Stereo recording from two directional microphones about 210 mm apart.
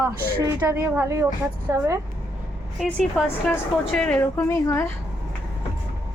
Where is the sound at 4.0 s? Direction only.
5° left (ahead or behind).